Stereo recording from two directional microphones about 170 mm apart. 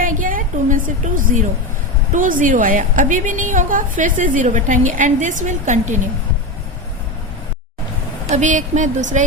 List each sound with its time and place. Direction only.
0.0 s a sound: 50° right (ahead or behind)
2.1 s a woman's voice: 50° right (ahead or behind)
8.3 s a woman's voice: 45° right (ahead or behind)